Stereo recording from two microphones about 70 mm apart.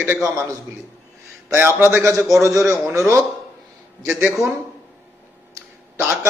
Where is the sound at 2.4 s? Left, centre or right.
Right.